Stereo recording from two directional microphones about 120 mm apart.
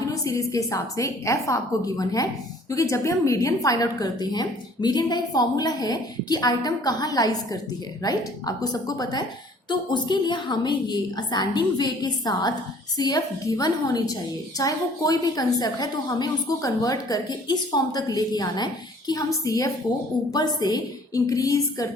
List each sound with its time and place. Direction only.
0.1 s a woman's voice: 25° left (ahead or behind)